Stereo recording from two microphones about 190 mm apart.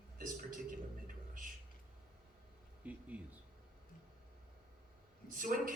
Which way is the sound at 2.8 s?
10° right (ahead or behind).